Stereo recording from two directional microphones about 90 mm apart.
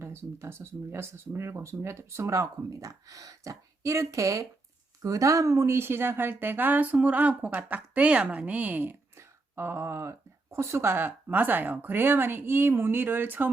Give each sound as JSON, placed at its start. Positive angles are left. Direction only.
{"t": 0.0, "sound": "speech", "side_deg": -30}